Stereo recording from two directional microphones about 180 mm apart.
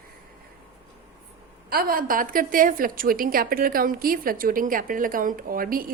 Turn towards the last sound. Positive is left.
turn(degrees=-55)  # may be behind; listen again after turning